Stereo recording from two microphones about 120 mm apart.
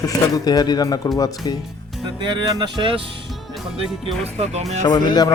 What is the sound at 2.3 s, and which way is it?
Speech, 40° right (ahead or behind).